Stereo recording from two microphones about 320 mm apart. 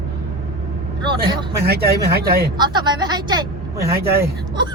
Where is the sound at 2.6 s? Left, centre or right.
Centre.